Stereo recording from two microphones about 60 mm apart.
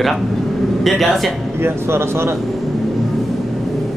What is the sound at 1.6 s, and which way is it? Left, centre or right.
Speech, right.